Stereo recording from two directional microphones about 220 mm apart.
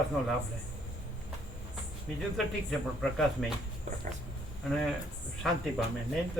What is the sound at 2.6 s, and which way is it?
Speech, centre (ahead or behind).